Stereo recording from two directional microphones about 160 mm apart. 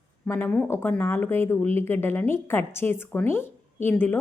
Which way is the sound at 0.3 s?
10° left (ahead or behind).